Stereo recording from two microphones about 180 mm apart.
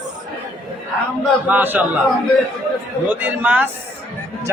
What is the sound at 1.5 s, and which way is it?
Speech, 10° right (ahead or behind).